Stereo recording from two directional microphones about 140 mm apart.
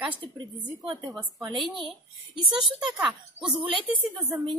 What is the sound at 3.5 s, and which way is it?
Speech, 40° right (ahead or behind).